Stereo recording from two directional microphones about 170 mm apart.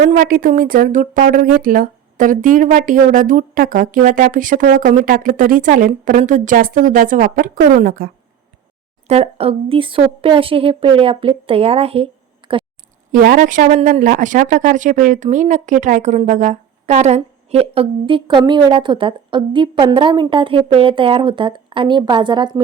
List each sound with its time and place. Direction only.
0.0 s speech: 55° right (ahead or behind)
9.0 s speech: 35° right (ahead or behind)
12.4 s a sound: 25° right (ahead or behind)
13.1 s speech: 50° right (ahead or behind); by 22.6 s 25° right (ahead or behind)